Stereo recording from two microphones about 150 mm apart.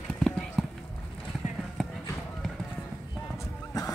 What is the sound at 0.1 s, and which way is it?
Clip-clop, 5° left (ahead or behind).